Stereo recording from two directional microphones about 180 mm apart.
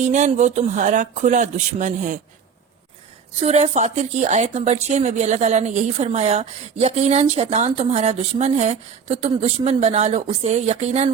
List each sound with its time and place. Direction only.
0.0 s speech: 40° right (ahead or behind)
3.4 s speech: 35° right (ahead or behind)